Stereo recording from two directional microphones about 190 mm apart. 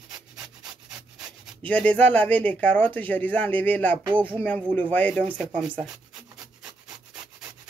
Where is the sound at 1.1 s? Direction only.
Centre (ahead or behind).